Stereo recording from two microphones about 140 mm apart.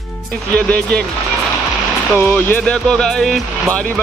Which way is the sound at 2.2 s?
10° left (ahead or behind).